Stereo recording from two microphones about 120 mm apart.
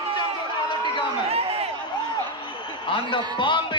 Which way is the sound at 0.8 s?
55° right (ahead or behind).